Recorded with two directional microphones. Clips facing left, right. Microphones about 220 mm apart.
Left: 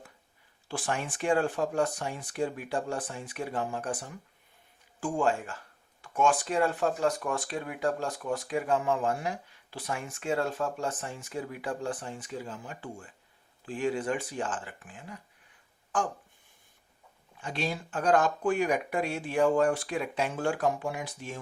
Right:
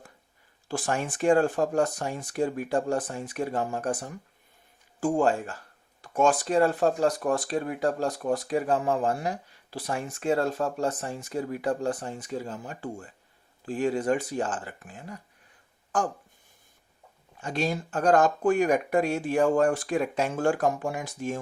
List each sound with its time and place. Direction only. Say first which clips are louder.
0.7 s speech: right 4 dB; 45° right (ahead or behind)
17.4 s speech: right 5 dB; 45° right (ahead or behind)